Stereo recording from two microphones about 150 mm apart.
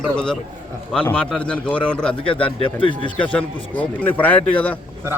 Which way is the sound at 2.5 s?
35° left (ahead or behind).